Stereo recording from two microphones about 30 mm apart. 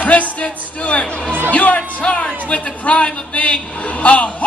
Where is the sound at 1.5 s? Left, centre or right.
Left.